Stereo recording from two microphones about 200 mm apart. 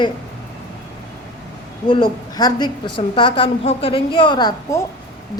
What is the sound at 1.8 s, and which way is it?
A woman's voice, 25° left (ahead or behind).